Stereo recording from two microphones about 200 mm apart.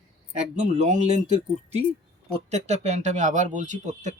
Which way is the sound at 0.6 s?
35° right (ahead or behind).